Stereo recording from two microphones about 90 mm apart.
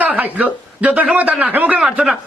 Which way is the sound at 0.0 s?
15° right (ahead or behind).